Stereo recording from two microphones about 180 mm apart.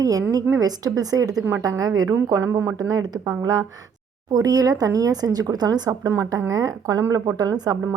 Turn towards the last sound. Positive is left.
turn(degrees=-20)  # may be behind; listen again after turning